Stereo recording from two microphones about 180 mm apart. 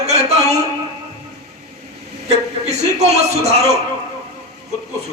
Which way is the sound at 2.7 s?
35° right (ahead or behind).